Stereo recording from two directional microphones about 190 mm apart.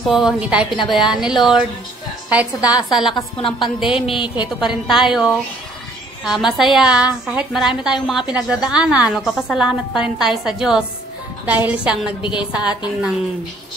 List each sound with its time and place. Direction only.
0.0 s a woman's voice: centre (ahead or behind)
2.3 s a woman's voice: 5° right (ahead or behind)
3.3 s a woman's voice: 25° left (ahead or behind)
4.6 s a woman's voice: centre (ahead or behind)